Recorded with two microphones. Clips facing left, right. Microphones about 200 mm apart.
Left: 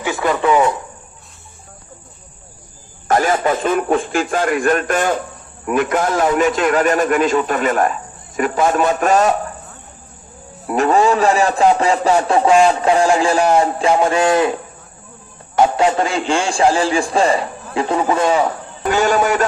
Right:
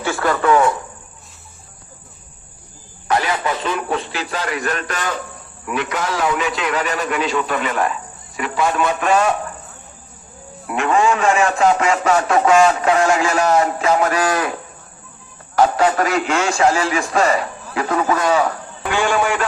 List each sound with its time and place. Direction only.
0.0 s radio: 15° left (ahead or behind)
3.1 s a man's voice: 45° left (ahead or behind)
10.7 s a man's voice: 35° left (ahead or behind)
15.5 s a man's voice: 25° left (ahead or behind)
18.8 s a man's voice: 40° left (ahead or behind)